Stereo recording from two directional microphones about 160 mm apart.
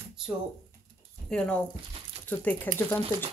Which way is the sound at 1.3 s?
5° left (ahead or behind).